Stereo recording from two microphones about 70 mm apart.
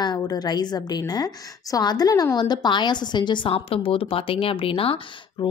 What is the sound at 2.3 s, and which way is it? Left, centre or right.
A woman's voice, left.